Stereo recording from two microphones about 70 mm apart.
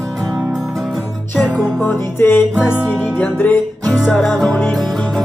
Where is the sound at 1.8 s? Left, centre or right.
Left.